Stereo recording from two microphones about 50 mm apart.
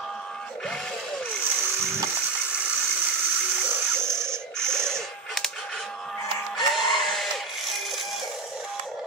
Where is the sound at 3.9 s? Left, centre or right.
Right.